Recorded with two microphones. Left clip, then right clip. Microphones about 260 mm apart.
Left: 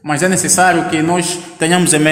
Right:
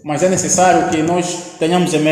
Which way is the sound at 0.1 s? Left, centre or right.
Left.